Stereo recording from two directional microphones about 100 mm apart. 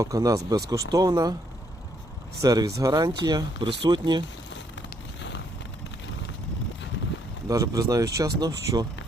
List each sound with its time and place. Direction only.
0.0 s speech: 35° right (ahead or behind)
2.4 s speech: 35° right (ahead or behind)
7.4 s speech: 35° right (ahead or behind)